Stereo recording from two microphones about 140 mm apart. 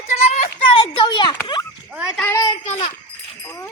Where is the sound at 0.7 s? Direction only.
40° left (ahead or behind).